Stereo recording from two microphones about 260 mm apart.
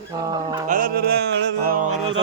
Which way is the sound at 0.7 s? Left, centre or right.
Right.